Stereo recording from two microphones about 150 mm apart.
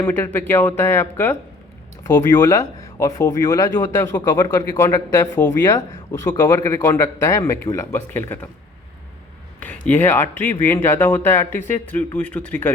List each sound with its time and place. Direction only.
0.0 s a man's voice: 15° left (ahead or behind)
9.8 s speech: 15° left (ahead or behind)